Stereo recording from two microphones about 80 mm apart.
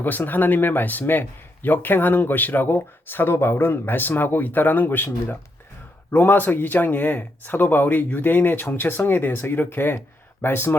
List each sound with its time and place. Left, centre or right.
0.0 s a man's voice: left